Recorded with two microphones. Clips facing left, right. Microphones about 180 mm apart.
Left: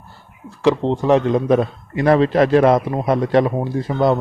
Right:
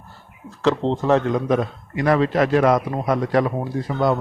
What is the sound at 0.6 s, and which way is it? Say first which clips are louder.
Speech: left 3 dB; 15° left (ahead or behind).